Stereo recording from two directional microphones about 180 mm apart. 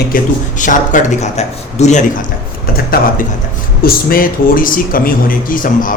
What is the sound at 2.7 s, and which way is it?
Speech, 55° left (ahead or behind).